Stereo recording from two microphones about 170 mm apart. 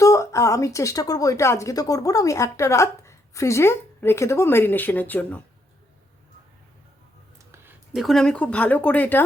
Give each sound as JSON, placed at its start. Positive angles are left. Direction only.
{"t": 0.0, "sound": "speech", "side_deg": 20}
{"t": 7.5, "sound": "a sound", "side_deg": -15}
{"t": 7.9, "sound": "speech", "side_deg": 0}